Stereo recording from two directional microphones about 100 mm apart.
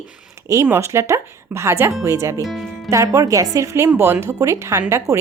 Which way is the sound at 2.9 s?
30° right (ahead or behind).